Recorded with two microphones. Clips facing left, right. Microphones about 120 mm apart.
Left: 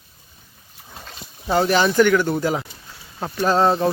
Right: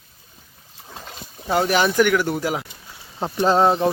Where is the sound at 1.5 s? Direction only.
10° right (ahead or behind).